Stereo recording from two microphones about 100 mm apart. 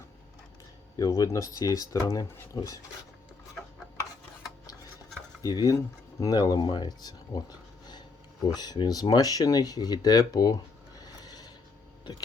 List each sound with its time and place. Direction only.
0.9 s speech: 35° left (ahead or behind)
5.4 s speech: 40° left (ahead or behind)
8.5 s speech: 40° left (ahead or behind)